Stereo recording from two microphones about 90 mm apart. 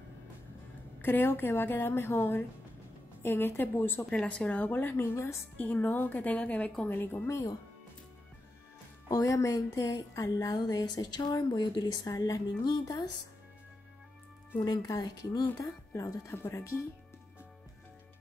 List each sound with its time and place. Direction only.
1.0 s a woman's voice: 25° left (ahead or behind)
4.0 s a woman's voice: 10° left (ahead or behind); by 5.4 s 30° left (ahead or behind)
5.6 s a woman's voice: 20° left (ahead or behind)
9.1 s a woman's voice: 40° left (ahead or behind)
12.1 s speech: 35° left (ahead or behind)
12.6 s a woman's voice: 50° left (ahead or behind)
14.6 s a woman's voice: 50° left (ahead or behind)
15.9 s speech: 35° left (ahead or behind)